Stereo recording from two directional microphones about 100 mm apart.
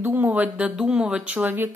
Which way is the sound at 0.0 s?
20° right (ahead or behind).